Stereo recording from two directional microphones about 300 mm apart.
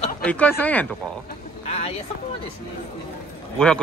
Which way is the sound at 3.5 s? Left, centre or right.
Centre.